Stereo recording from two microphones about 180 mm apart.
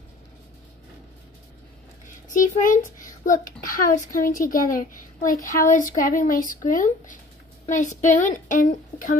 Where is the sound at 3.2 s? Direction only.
50° left (ahead or behind).